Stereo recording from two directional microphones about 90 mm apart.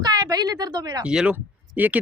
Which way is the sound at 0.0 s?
50° right (ahead or behind).